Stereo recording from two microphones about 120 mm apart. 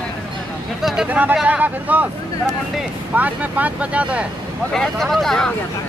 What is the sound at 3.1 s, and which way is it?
Speech, 15° right (ahead or behind).